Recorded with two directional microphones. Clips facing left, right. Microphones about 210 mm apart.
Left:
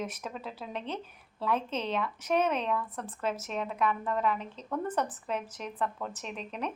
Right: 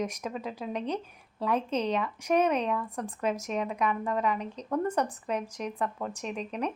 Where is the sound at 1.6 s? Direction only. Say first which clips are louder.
Right 5 dB; 35° right (ahead or behind).